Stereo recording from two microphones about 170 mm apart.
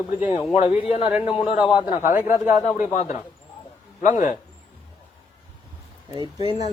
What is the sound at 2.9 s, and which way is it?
Speech, 45° left (ahead or behind).